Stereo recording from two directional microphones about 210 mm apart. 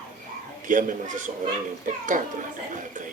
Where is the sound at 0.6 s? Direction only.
40° right (ahead or behind).